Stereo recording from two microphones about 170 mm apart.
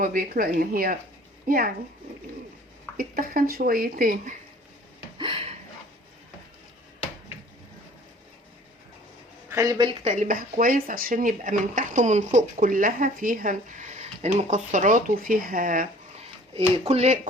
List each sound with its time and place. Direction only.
0.0 s speech: 55° right (ahead or behind)
3.0 s speech: 60° right (ahead or behind)
5.1 s a sound: 30° right (ahead or behind)
9.5 s speech: 20° right (ahead or behind)
10.0 s speech: 45° right (ahead or behind)
16.2 s speech: 35° right (ahead or behind)